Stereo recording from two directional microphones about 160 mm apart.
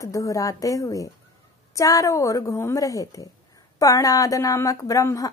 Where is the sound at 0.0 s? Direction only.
20° left (ahead or behind).